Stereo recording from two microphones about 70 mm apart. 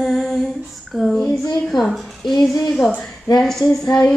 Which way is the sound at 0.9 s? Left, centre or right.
Centre.